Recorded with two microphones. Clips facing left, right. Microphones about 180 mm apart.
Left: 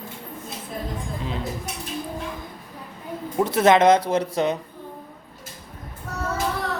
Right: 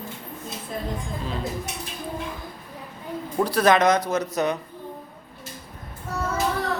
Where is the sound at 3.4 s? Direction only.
20° left (ahead or behind).